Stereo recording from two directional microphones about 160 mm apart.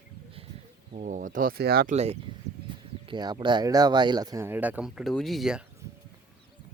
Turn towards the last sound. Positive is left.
turn(degrees=0)  # may be behind; listen again after turning